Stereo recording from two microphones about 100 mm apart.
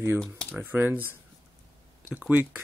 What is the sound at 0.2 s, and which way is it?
Speech, 10° left (ahead or behind).